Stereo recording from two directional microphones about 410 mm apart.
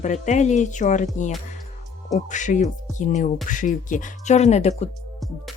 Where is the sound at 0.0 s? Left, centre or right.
Centre.